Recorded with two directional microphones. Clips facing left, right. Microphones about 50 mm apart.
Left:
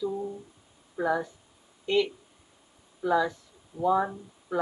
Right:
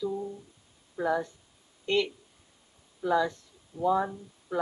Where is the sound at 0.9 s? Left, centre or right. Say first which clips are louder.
Left 1 dB; centre.